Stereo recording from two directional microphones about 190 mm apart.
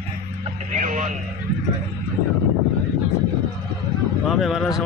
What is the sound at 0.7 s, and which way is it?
Speech, 40° right (ahead or behind).